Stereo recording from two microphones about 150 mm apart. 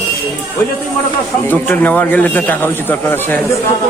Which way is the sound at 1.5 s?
10° left (ahead or behind).